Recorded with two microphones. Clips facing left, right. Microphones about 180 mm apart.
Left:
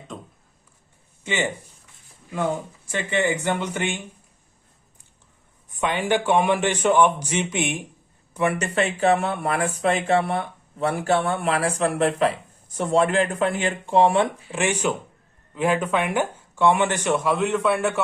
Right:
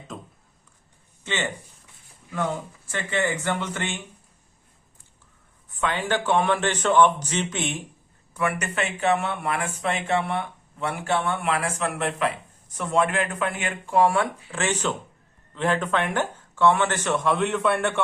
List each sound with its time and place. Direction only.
0.1 s a sound: centre (ahead or behind)
1.2 s speech: 10° left (ahead or behind)
5.7 s speech: 15° left (ahead or behind)
17.2 s a man's voice: centre (ahead or behind)